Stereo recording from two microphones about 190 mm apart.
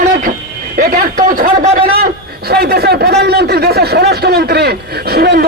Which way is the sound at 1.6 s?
35° right (ahead or behind).